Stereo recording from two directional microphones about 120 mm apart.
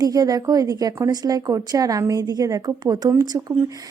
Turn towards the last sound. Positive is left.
turn(degrees=-25)  # may be behind; listen again after turning